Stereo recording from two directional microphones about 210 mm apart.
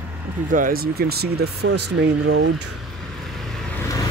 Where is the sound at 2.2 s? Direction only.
65° right (ahead or behind).